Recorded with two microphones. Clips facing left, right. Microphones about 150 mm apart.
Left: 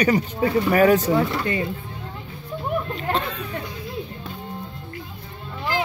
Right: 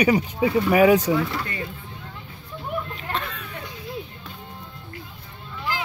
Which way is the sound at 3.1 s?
35° left (ahead or behind).